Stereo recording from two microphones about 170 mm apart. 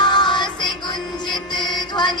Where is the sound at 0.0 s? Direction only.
25° left (ahead or behind).